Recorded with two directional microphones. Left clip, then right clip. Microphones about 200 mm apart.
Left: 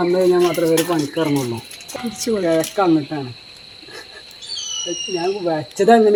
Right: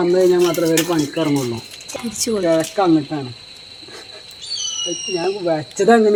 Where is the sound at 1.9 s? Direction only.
5° right (ahead or behind).